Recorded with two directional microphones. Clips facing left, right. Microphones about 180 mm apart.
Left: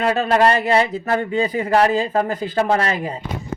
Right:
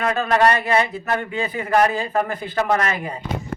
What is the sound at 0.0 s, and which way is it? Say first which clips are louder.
Speech: left 2 dB; 30° left (ahead or behind).